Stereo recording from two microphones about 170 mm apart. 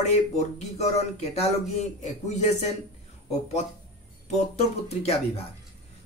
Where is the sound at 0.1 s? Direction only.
40° left (ahead or behind).